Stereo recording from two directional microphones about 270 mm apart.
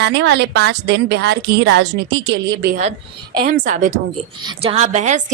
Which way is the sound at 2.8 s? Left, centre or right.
Centre.